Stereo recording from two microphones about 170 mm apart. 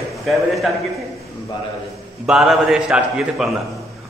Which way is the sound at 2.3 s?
Centre (ahead or behind).